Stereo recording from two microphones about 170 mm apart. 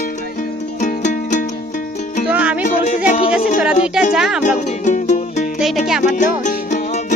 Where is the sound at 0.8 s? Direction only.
45° left (ahead or behind).